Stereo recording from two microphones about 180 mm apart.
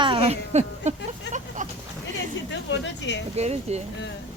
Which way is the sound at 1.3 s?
75° left (ahead or behind).